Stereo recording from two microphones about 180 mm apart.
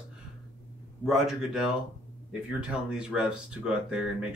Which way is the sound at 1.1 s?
Centre (ahead or behind).